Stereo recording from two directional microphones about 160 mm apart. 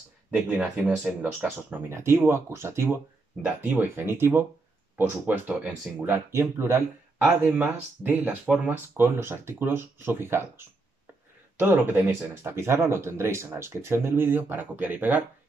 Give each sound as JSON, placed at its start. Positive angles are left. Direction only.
{"t": 0.3, "sound": "speech", "side_deg": -10}